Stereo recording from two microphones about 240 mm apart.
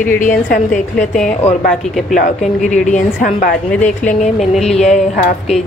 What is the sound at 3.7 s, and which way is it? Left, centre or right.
A woman's voice, centre.